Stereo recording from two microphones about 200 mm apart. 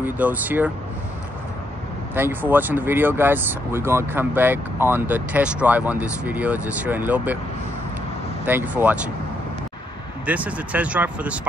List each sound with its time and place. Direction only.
0.0 s speech: 10° right (ahead or behind)
2.1 s speech: 10° right (ahead or behind)
8.5 s speech: 10° right (ahead or behind)
10.2 s speech: 5° right (ahead or behind)